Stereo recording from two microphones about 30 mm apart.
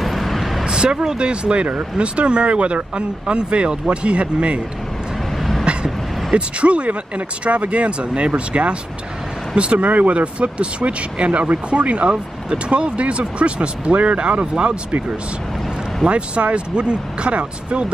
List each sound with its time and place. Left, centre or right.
0.0 s vehicle: centre
0.7 s speech: right
6.3 s speech: right
8.5 s speech: right
9.8 s speech: right
10.1 s speech: right
11.4 s speech: right
16.1 s speech: right